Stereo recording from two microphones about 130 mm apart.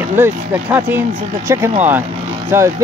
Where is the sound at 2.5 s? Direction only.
20° right (ahead or behind).